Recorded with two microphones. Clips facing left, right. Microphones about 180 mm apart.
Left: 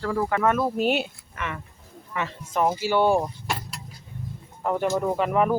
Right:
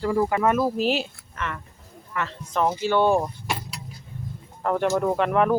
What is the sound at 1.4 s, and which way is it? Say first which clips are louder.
Speech: right 1 dB; 15° left (ahead or behind).